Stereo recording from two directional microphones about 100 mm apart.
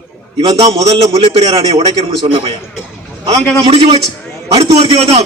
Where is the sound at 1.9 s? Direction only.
40° right (ahead or behind).